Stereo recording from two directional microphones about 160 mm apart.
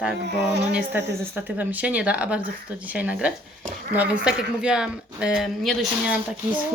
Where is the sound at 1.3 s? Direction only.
10° right (ahead or behind).